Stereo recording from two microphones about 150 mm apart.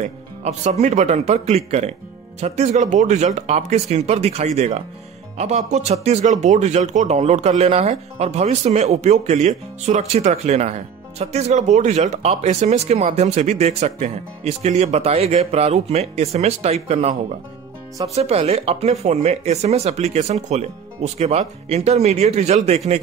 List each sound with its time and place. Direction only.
0.0 s speech: 50° right (ahead or behind)